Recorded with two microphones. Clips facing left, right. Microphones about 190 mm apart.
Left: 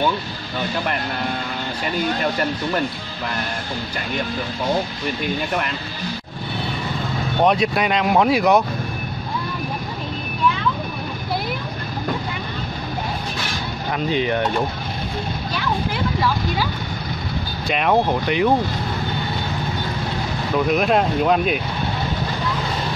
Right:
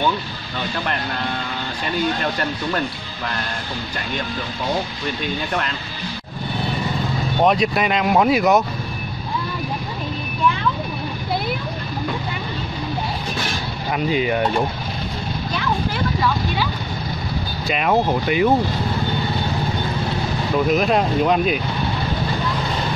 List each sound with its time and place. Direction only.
7.4 s speech: centre (ahead or behind)
13.9 s speech: 5° right (ahead or behind)
17.6 s speech: centre (ahead or behind)
20.6 s speech: centre (ahead or behind)